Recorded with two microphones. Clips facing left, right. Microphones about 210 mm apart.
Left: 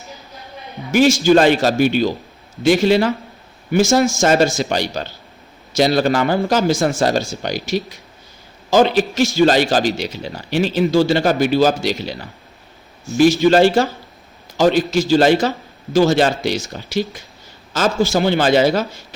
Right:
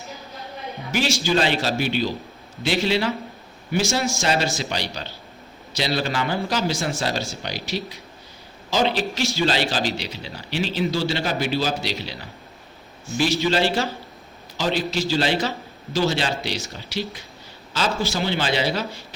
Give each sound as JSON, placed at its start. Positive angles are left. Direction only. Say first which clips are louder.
{"t": 0.9, "sound": "a man's voice", "louder": "left 10 dB", "side_deg": 50}
{"t": 13.4, "sound": "a man's voice", "louder": "left 9 dB", "side_deg": 50}